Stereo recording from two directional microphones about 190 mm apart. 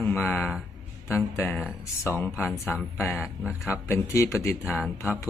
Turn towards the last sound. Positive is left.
turn(degrees=15)  # may be behind; listen again after turning